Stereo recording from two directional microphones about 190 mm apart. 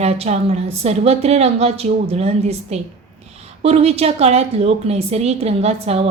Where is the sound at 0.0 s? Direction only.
35° right (ahead or behind).